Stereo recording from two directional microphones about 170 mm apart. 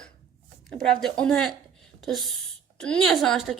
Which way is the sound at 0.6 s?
Centre (ahead or behind).